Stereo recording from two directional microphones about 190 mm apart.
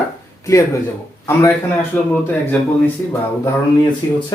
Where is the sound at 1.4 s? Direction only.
15° left (ahead or behind).